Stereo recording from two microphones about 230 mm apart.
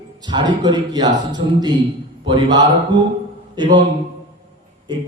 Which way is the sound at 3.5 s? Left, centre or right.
Centre.